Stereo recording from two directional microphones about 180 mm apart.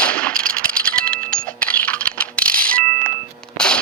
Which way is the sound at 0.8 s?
5° left (ahead or behind).